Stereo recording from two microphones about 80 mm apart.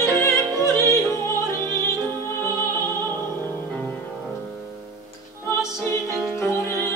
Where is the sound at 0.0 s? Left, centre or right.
Left.